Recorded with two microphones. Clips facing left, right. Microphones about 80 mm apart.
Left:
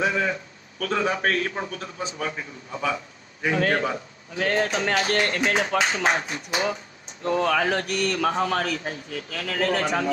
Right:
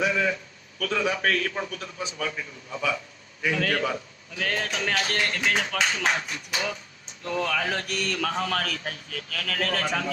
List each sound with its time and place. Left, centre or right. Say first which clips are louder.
0.0 s a man's voice: left 1 dB; left
8.1 s a man's voice: left 3 dB; left